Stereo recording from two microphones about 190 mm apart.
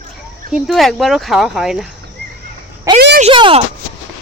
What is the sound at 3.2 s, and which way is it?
Speech, 25° right (ahead or behind).